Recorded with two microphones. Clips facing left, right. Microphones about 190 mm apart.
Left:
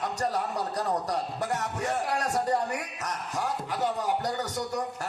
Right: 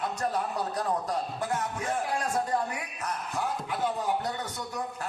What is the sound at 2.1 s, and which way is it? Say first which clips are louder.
Speech: left 2 dB; 40° left (ahead or behind).